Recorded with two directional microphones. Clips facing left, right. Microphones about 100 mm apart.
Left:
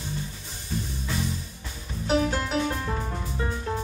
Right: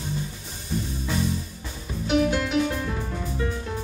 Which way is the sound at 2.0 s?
35° left (ahead or behind).